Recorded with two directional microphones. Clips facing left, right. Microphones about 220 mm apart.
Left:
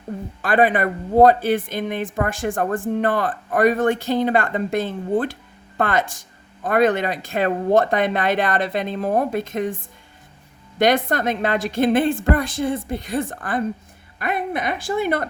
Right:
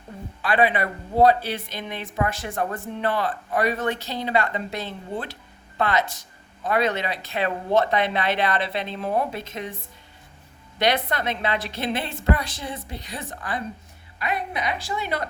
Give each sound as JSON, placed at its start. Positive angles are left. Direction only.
{"t": 0.4, "sound": "speech", "side_deg": 45}
{"t": 10.8, "sound": "speech", "side_deg": 45}